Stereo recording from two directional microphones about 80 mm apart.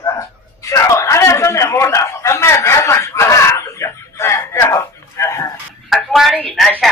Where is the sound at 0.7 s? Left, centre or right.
Left.